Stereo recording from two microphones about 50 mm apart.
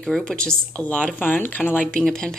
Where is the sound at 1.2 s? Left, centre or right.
Left.